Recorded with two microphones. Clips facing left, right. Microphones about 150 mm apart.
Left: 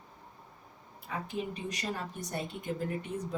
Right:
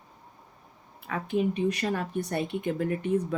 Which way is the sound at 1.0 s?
65° right (ahead or behind).